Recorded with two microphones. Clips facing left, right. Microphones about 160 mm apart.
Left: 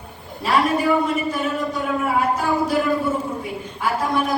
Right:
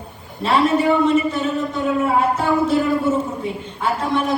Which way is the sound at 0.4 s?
25° right (ahead or behind).